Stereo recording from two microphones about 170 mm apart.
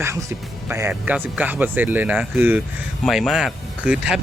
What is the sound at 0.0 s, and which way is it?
Speech, 15° right (ahead or behind).